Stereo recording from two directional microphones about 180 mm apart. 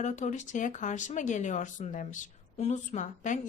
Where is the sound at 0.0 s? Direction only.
40° left (ahead or behind).